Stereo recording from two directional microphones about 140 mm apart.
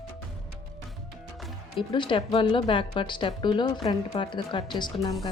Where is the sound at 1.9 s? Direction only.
35° left (ahead or behind).